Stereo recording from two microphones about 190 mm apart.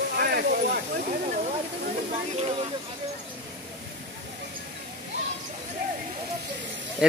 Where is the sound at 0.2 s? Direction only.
55° right (ahead or behind).